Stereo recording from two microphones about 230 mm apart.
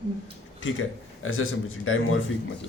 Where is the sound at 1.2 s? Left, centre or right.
Left.